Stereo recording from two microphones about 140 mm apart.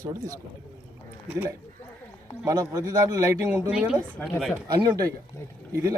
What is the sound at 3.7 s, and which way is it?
Speech, 5° right (ahead or behind).